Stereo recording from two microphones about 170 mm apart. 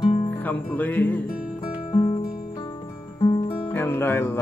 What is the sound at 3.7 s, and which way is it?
Music, 10° left (ahead or behind).